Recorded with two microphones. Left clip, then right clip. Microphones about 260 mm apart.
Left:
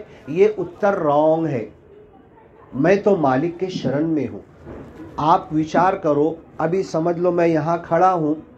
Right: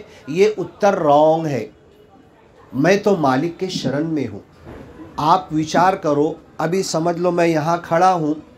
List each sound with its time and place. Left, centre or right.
0.3 s speech: right
2.8 s speech: right